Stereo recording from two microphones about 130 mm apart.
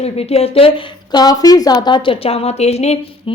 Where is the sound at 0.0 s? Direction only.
50° left (ahead or behind).